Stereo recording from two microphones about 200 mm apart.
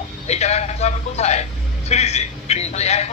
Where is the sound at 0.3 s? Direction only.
35° left (ahead or behind).